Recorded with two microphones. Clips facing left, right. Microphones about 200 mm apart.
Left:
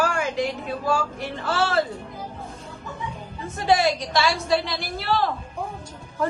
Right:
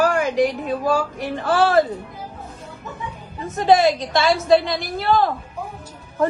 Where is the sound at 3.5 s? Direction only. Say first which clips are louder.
Right 5 dB; 50° right (ahead or behind).